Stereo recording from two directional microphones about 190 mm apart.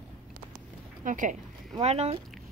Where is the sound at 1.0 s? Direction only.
40° right (ahead or behind).